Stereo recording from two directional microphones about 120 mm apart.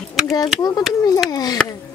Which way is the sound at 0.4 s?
35° left (ahead or behind).